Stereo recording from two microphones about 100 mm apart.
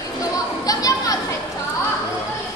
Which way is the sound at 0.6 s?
35° left (ahead or behind).